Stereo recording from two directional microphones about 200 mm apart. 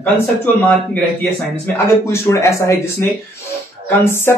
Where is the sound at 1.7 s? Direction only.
15° left (ahead or behind).